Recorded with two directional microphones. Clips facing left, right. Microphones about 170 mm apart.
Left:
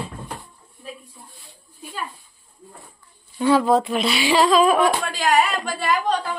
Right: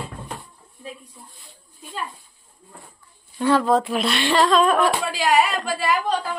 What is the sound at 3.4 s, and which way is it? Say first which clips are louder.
Speech: left 1 dB; 5° left (ahead or behind).